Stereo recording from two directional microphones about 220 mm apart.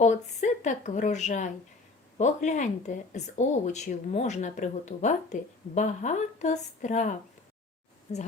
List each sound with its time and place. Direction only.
0.0 s speech: 30° left (ahead or behind)